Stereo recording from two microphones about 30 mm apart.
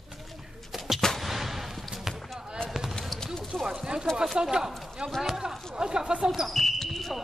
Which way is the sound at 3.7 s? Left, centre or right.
Right.